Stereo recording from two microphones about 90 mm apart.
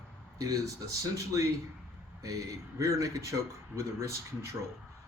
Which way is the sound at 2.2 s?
40° right (ahead or behind).